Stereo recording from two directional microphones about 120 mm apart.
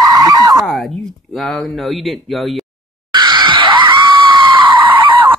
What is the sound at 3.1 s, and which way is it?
Screaming, 40° right (ahead or behind).